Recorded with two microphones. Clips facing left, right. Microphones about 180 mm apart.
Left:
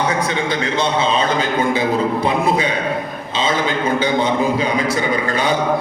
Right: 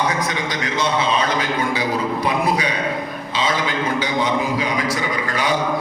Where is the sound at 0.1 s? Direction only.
30° left (ahead or behind).